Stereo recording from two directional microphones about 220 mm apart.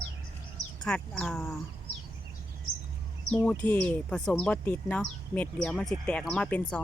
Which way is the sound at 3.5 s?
5° left (ahead or behind).